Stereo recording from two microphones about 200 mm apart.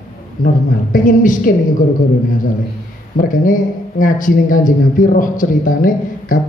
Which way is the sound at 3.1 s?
45° left (ahead or behind).